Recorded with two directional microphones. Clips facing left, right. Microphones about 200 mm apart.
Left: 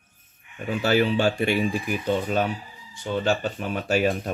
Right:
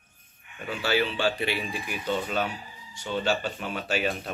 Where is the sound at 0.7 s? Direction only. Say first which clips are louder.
Left 5 dB; 45° left (ahead or behind).